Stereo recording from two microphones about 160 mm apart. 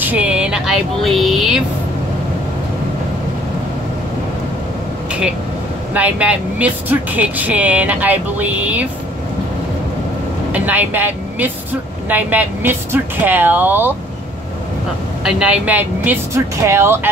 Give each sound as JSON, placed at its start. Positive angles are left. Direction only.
{"t": 0.0, "sound": "speech", "side_deg": -10}
{"t": 5.9, "sound": "speech", "side_deg": -10}
{"t": 10.5, "sound": "a woman's voice", "side_deg": -10}
{"t": 15.2, "sound": "speech", "side_deg": -5}